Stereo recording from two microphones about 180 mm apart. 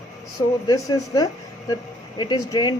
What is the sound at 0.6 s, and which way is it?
A woman's voice, 20° left (ahead or behind).